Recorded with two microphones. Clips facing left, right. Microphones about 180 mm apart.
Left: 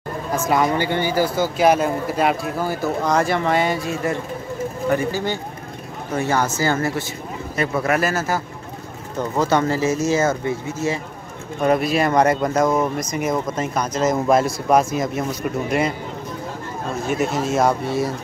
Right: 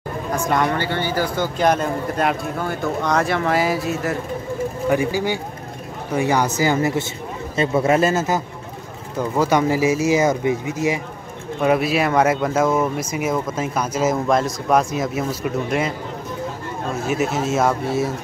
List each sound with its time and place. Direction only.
0.5 s speech: 10° left (ahead or behind); by 8.4 s 20° right (ahead or behind)
9.2 s speech: 10° right (ahead or behind)
11.6 s speech: 5° right (ahead or behind)
14.2 s speech: 5° left (ahead or behind)
17.0 s speech: 5° right (ahead or behind)